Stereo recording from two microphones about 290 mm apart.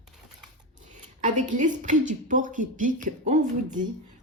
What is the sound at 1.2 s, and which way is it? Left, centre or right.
A woman's voice, right.